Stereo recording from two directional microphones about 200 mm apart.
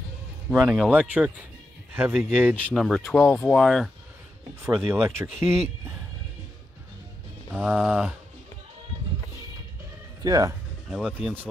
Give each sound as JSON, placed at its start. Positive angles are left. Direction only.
{"t": 0.5, "sound": "a man's voice", "side_deg": -5}
{"t": 3.3, "sound": "speech", "side_deg": 10}
{"t": 4.6, "sound": "speech", "side_deg": -10}
{"t": 7.5, "sound": "speech", "side_deg": -5}
{"t": 10.2, "sound": "speech", "side_deg": -20}
{"t": 10.9, "sound": "speech", "side_deg": -5}